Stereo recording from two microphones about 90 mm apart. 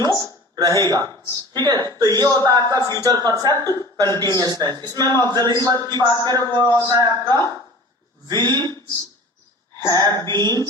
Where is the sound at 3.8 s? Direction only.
45° right (ahead or behind).